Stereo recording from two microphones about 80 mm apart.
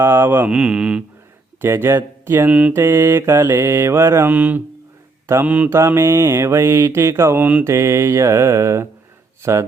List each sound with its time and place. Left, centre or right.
0.0 s mantra: right
0.5 s speech: centre
1.6 s mantra: right
2.5 s speech: centre
2.7 s mantra: right
4.3 s mantra: right
5.2 s mantra: right
5.5 s mantra: centre
5.7 s mantra: right
7.3 s mantra: right
7.6 s mantra: right